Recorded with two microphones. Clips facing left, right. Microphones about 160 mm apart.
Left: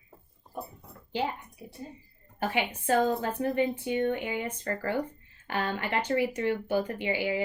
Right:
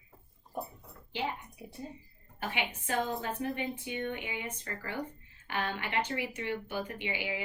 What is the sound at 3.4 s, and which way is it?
Speech, 40° left (ahead or behind).